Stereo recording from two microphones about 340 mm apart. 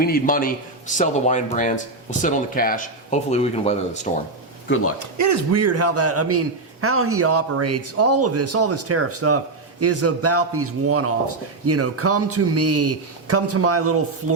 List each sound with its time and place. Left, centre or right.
0.0 s a man's voice: left
4.7 s a man's voice: left
4.9 s a man's voice: right